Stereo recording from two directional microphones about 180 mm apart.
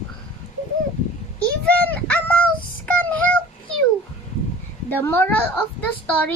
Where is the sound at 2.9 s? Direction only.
5° left (ahead or behind).